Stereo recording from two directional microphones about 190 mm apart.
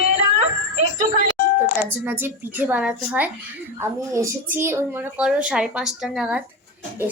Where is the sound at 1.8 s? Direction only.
10° right (ahead or behind).